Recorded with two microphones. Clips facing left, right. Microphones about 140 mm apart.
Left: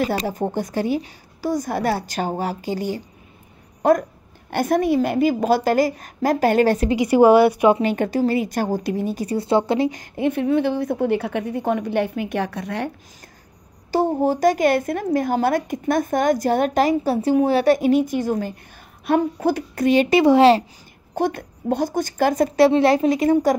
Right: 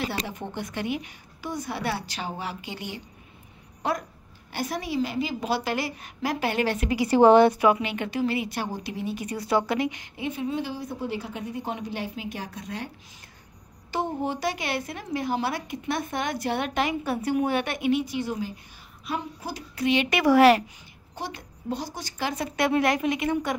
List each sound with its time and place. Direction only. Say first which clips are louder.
0.0 s a woman's voice: left 9 dB; 45° left (ahead or behind)
6.9 s speech: left 1 dB; 15° left (ahead or behind)
7.8 s a woman's voice: left 8 dB; 40° left (ahead or behind); by 9.8 s 25° left (ahead or behind)
9.8 s a woman's voice: left 7 dB; 40° left (ahead or behind)
10.2 s a woman's voice: left 10 dB; 60° left (ahead or behind)
13.9 s a woman's voice: left 9 dB; 40° left (ahead or behind)
19.0 s a woman's voice: left 14 dB; 60° left (ahead or behind); by 20.6 s 25° left (ahead or behind)
21.1 s a woman's voice: left 13 dB; 55° left (ahead or behind)
22.7 s a woman's voice: left 7 dB; 30° left (ahead or behind)